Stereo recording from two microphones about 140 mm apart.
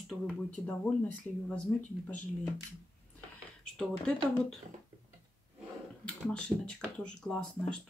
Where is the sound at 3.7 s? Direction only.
5° left (ahead or behind).